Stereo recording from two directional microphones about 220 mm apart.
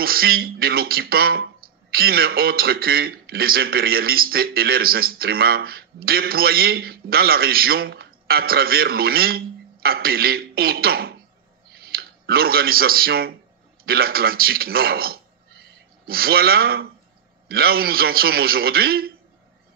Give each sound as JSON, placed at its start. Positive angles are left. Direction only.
{"t": 0.0, "sound": "a man's voice", "side_deg": -45}